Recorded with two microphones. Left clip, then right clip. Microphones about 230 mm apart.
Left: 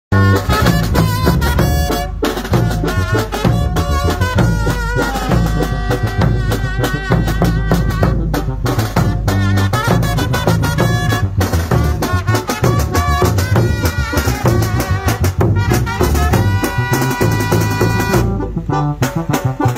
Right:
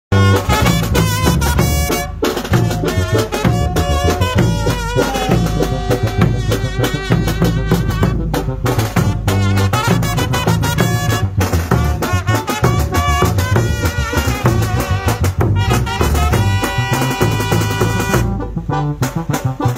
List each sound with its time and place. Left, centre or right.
0.1 s music: right
4.5 s music: right
9.6 s music: right